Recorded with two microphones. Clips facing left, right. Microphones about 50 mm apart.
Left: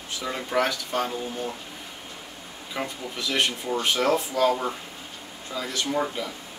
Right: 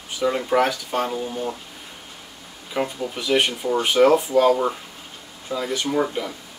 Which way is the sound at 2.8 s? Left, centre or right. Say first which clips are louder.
Right 6 dB; centre.